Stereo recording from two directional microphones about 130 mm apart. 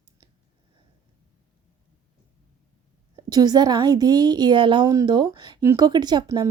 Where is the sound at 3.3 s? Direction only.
30° right (ahead or behind).